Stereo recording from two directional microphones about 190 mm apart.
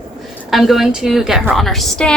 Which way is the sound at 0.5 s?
Centre (ahead or behind).